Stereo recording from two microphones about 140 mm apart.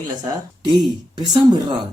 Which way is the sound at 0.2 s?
30° right (ahead or behind).